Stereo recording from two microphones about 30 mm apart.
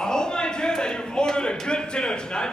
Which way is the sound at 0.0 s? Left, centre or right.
Left.